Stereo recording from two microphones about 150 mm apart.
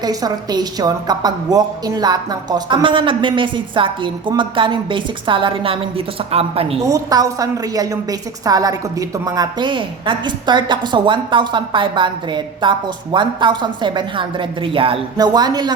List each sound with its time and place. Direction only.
0.0 s a woman's voice: 25° right (ahead or behind); by 6.7 s 40° right (ahead or behind)
6.8 s a woman's voice: 25° right (ahead or behind)
15.2 s a woman's voice: 25° right (ahead or behind)